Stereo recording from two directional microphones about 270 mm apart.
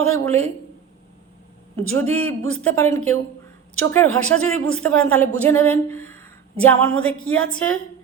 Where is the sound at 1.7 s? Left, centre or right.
Centre.